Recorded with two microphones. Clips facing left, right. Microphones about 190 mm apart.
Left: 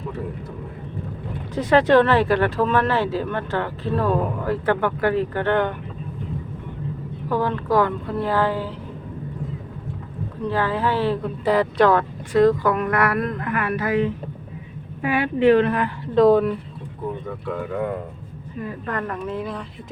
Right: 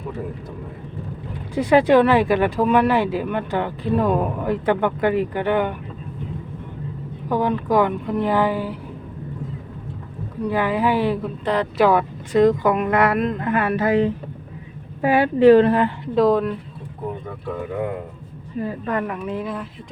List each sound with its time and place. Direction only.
1.5 s speech: 10° right (ahead or behind)
7.3 s speech: 15° right (ahead or behind)
10.4 s speech: 15° right (ahead or behind)
11.4 s speech: 5° left (ahead or behind)
11.8 s a woman's voice: 10° right (ahead or behind); by 15.9 s 30° right (ahead or behind)
16.1 s speech: centre (ahead or behind)
18.9 s speech: 10° right (ahead or behind)